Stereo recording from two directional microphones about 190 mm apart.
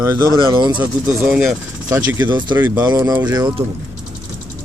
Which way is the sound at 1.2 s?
5° right (ahead or behind).